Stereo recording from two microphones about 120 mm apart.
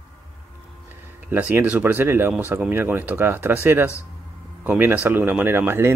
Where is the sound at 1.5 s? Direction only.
15° right (ahead or behind).